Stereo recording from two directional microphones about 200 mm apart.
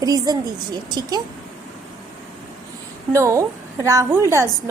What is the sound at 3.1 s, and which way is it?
A woman's voice, 15° right (ahead or behind).